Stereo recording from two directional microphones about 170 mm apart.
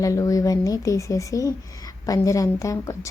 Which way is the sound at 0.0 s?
20° left (ahead or behind).